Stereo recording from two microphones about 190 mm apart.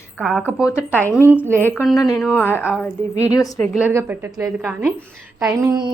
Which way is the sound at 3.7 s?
10° right (ahead or behind).